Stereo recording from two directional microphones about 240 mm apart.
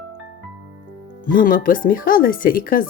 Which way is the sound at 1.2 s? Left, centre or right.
Left.